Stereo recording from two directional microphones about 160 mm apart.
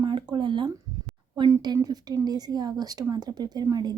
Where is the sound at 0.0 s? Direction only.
30° right (ahead or behind).